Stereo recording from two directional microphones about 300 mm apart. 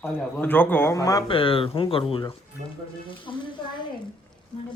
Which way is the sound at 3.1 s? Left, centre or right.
Centre.